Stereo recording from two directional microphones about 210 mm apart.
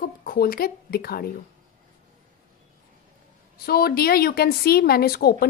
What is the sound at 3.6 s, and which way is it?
Speech, 45° left (ahead or behind).